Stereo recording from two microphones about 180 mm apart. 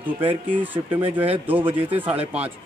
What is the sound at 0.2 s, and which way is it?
Speech, 30° right (ahead or behind).